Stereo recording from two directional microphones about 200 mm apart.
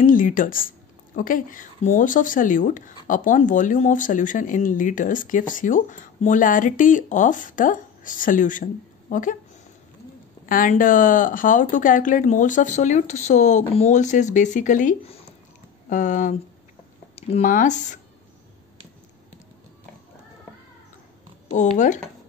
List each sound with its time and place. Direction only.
0.0 s speech: 45° left (ahead or behind)
10.4 s speech: 45° left (ahead or behind)
21.5 s speech: 35° left (ahead or behind)